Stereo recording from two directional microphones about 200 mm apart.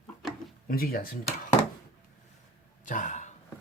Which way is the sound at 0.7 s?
50° left (ahead or behind).